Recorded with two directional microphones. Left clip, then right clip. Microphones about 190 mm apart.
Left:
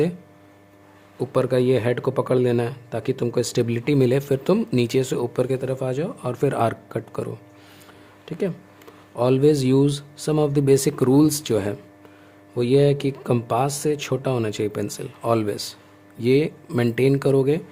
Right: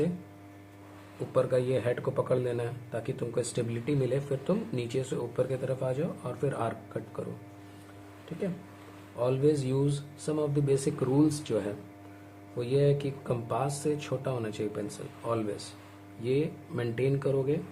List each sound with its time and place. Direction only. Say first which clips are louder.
1.3 s speech: left 7 dB; 60° left (ahead or behind)
8.3 s speech: left 9 dB; 60° left (ahead or behind)